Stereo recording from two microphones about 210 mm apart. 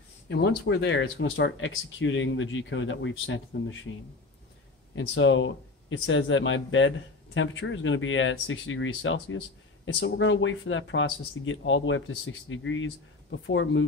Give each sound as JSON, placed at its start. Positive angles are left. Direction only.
{"t": 0.3, "sound": "speech", "side_deg": 50}
{"t": 4.9, "sound": "speech", "side_deg": 65}